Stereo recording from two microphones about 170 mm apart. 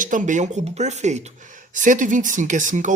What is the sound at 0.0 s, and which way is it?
Speech, 50° right (ahead or behind).